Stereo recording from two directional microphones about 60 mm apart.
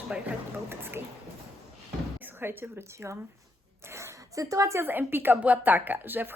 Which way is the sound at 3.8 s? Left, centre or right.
Right.